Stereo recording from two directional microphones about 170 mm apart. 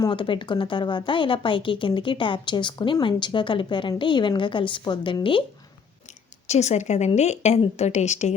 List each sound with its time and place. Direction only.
0.0 s a woman's voice: 30° left (ahead or behind)
6.5 s a woman's voice: 40° left (ahead or behind)